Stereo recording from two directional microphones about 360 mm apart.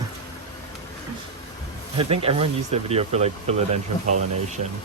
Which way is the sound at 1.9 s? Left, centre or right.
Centre.